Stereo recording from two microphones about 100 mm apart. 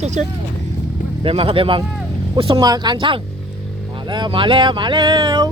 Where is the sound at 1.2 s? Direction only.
65° right (ahead or behind).